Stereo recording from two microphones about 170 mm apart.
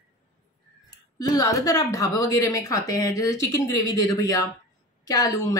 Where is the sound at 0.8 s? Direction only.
20° left (ahead or behind).